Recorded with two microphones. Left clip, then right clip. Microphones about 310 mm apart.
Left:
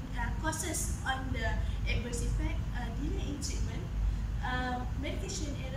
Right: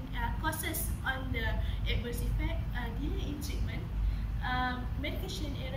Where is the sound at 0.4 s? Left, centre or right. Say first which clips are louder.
Left 2 dB; centre.